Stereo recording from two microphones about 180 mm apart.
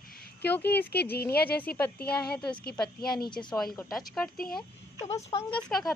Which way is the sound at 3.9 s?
Centre (ahead or behind).